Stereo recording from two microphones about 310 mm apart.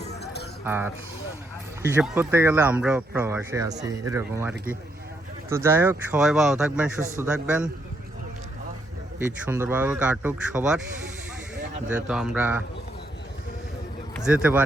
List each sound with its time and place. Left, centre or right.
0.0 s a sound: left
0.6 s speech: centre
9.1 s speech: centre
11.9 s speech: centre
14.3 s speech: centre